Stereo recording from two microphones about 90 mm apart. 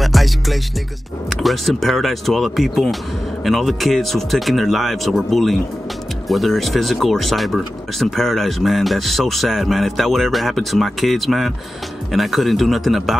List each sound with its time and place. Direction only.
0.0 s music: centre (ahead or behind)
1.3 s speech: centre (ahead or behind)